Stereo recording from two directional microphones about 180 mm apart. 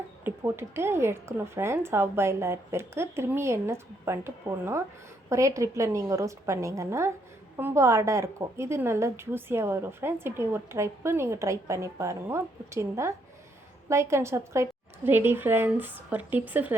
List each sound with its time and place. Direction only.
0.3 s a woman's voice: 15° right (ahead or behind)